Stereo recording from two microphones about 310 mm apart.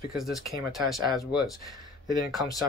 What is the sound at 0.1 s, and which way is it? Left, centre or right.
Speech, centre.